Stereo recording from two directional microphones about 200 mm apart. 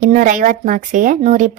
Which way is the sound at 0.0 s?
40° right (ahead or behind).